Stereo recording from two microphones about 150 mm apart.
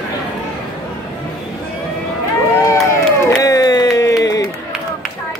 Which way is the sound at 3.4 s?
25° left (ahead or behind).